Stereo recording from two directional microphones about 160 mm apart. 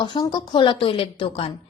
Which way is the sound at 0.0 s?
30° left (ahead or behind).